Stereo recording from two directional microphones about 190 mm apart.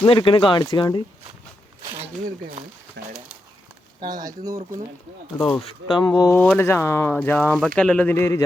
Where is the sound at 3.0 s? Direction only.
60° right (ahead or behind).